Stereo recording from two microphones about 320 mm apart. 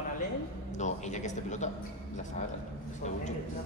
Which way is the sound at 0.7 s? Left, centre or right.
Left.